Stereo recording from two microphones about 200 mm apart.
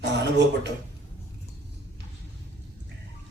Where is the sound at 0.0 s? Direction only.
60° right (ahead or behind).